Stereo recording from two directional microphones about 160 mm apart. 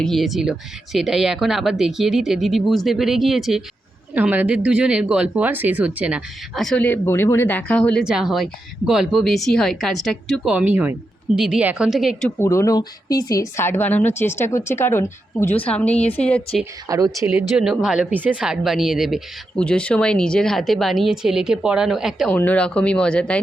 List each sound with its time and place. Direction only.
0.0 s speech: centre (ahead or behind)
8.0 s speech: 5° right (ahead or behind)
12.4 s a woman's voice: 15° left (ahead or behind)
16.9 s speech: 20° right (ahead or behind)
17.6 s speech: 5° right (ahead or behind)
22.4 s a woman's voice: 10° left (ahead or behind)